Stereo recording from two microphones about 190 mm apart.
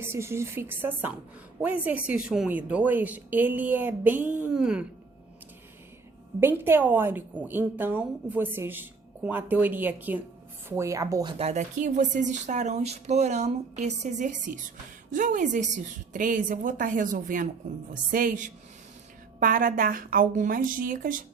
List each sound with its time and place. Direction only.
0.0 s a woman's voice: 15° right (ahead or behind)
6.4 s a woman's voice: 10° right (ahead or behind); by 21.2 s 45° right (ahead or behind)